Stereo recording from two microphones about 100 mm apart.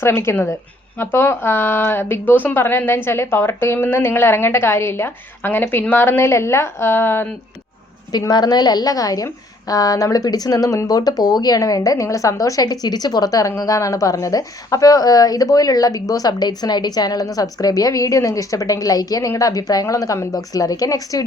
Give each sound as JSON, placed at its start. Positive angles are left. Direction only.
{"t": 0.0, "sound": "speech", "side_deg": 25}
{"t": 8.3, "sound": "speech", "side_deg": 45}